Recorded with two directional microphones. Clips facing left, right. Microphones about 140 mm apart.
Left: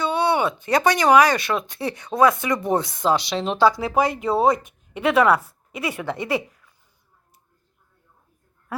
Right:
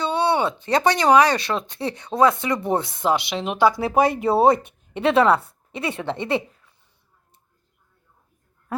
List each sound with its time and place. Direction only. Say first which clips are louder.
0.0 s speech: even; 30° right (ahead or behind)
3.8 s speech: right 2 dB; 25° right (ahead or behind)